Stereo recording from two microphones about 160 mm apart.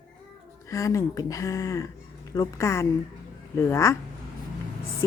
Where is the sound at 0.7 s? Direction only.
20° left (ahead or behind).